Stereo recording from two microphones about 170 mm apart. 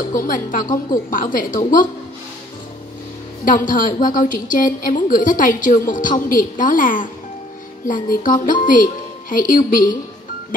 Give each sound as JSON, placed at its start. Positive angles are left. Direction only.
{"t": 0.1, "sound": "a woman's voice", "side_deg": 55}
{"t": 3.4, "sound": "a woman's voice", "side_deg": 55}